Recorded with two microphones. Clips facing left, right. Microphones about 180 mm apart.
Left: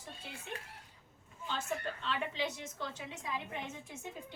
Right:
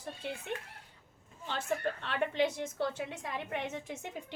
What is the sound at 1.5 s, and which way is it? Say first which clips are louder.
A woman's voice: right 5 dB; 60° right (ahead or behind).